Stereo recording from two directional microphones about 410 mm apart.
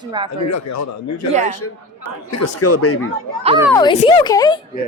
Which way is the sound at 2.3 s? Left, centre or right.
Left.